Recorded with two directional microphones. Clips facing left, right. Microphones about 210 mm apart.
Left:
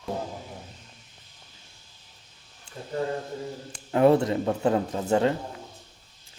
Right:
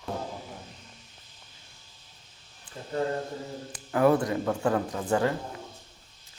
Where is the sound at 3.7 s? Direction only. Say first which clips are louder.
Left 3 dB; 25° left (ahead or behind).